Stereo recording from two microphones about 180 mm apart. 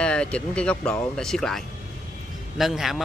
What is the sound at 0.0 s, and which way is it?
A man's voice, 5° left (ahead or behind).